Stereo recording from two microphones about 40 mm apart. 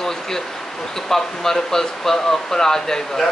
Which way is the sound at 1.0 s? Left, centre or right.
Centre.